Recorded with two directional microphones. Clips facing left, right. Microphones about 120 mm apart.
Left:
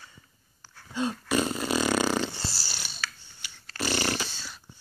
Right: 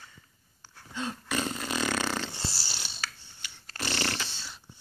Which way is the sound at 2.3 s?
20° right (ahead or behind).